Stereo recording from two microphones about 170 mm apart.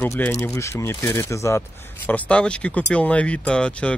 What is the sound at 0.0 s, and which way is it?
Speech, 15° left (ahead or behind).